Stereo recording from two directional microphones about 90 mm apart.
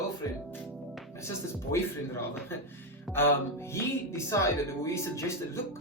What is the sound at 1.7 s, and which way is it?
Speech, 30° left (ahead or behind).